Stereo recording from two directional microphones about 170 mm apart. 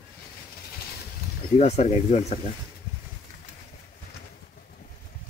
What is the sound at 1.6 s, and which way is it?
Speech, 40° left (ahead or behind).